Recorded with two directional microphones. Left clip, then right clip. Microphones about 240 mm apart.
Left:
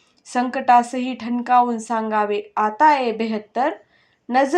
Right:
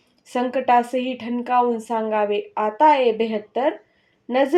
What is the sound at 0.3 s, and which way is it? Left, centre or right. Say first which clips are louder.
A woman's voice: left 2 dB; centre.